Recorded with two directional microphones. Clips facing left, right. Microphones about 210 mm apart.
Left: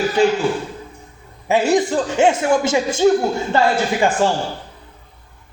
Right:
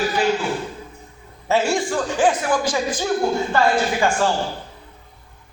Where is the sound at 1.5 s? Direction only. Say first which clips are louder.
Left 4 dB; 15° left (ahead or behind).